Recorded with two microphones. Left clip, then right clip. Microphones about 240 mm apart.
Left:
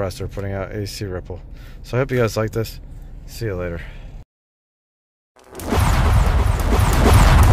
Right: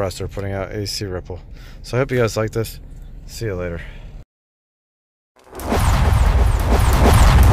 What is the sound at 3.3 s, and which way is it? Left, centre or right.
Speech, centre.